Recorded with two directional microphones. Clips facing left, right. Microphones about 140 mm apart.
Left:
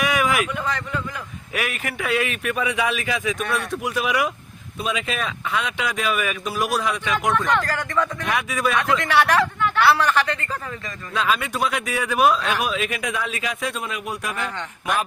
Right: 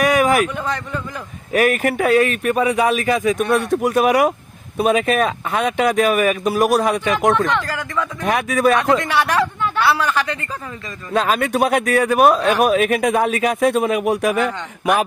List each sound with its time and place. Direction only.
0.0 s a sound: 40° right (ahead or behind)
1.5 s speech: 50° right (ahead or behind)
7.5 s speech: 5° right (ahead or behind)
8.2 s speech: 45° right (ahead or behind)
9.0 s a woman's voice: 15° right (ahead or behind)
11.1 s speech: 45° right (ahead or behind); by 14.5 s 65° right (ahead or behind)